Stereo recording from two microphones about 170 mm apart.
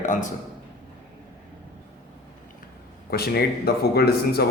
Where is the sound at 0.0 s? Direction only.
45° left (ahead or behind).